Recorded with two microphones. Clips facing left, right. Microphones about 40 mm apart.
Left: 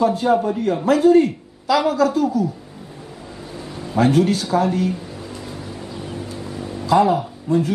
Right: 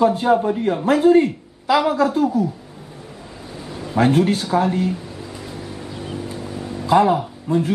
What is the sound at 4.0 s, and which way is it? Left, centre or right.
Speech, right.